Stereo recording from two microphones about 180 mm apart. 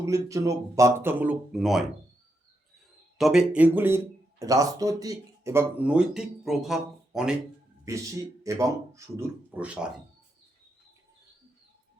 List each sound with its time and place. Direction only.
0.0 s speech: 20° right (ahead or behind); by 1.9 s centre (ahead or behind)
3.2 s speech: centre (ahead or behind)
7.9 s speech: 15° right (ahead or behind)